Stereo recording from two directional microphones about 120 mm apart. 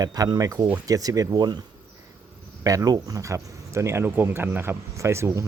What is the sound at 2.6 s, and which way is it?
Speech, 30° right (ahead or behind).